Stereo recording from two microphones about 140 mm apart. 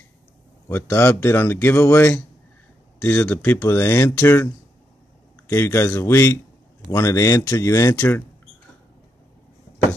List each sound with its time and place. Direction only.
0.7 s speech: 15° left (ahead or behind)
5.5 s speech: 20° left (ahead or behind)